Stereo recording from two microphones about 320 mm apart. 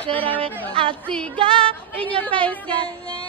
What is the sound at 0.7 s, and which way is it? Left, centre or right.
Music, centre.